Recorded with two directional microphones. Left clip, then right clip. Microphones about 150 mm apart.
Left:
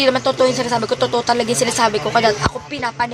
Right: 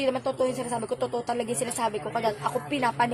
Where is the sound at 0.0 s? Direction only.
5° right (ahead or behind).